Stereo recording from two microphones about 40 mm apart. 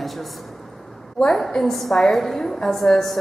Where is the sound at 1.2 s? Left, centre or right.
Centre.